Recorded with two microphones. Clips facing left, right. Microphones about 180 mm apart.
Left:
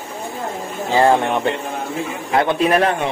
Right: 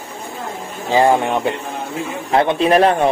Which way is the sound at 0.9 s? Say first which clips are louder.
Right 1 dB; 15° right (ahead or behind).